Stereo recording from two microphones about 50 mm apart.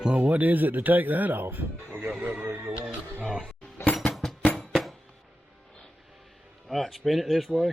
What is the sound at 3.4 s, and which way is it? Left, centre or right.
Music, centre.